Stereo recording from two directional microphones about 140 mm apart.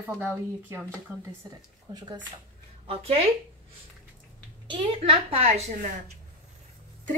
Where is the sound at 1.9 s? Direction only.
30° right (ahead or behind).